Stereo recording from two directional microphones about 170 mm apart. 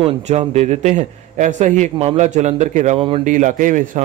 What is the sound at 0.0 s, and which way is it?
A man's voice, 35° right (ahead or behind).